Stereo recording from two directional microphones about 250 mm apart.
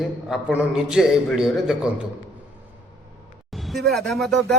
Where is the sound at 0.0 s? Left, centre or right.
Centre.